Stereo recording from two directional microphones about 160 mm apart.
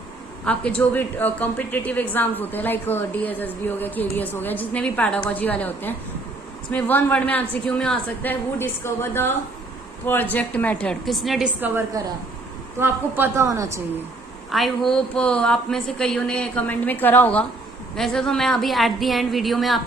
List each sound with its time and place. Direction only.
0.4 s a woman's voice: 10° left (ahead or behind)
11.6 s a woman's voice: 15° right (ahead or behind)
14.5 s a woman's voice: centre (ahead or behind)